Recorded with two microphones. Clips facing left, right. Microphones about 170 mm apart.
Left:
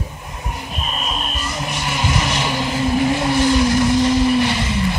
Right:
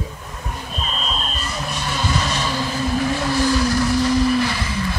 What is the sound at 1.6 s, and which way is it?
Vehicle, 15° left (ahead or behind).